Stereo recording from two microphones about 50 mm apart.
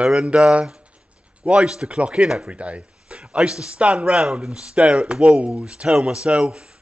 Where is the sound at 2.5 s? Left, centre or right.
Right.